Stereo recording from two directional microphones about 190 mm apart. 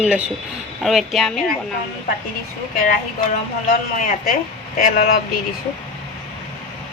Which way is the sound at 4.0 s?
45° left (ahead or behind).